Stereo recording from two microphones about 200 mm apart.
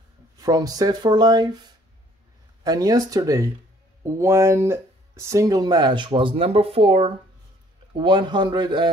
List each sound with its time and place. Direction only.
0.4 s speech: 20° right (ahead or behind)
2.6 s speech: 20° right (ahead or behind)